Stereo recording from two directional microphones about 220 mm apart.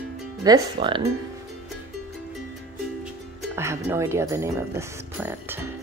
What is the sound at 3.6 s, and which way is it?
Speech, 10° right (ahead or behind).